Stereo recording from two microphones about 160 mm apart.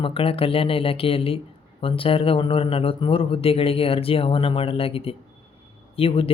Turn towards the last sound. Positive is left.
turn(degrees=35)  # may be behind; listen again after turning